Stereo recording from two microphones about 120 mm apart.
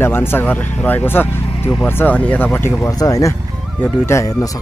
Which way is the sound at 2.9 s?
30° left (ahead or behind).